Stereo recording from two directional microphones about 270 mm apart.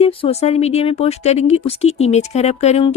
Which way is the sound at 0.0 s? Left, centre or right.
Left.